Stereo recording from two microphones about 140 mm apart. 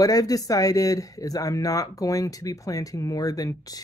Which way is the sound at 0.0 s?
25° left (ahead or behind).